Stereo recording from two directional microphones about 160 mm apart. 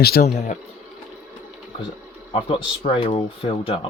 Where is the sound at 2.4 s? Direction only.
35° left (ahead or behind).